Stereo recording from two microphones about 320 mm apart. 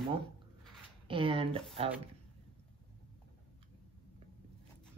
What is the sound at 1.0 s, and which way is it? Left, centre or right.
Speech, centre.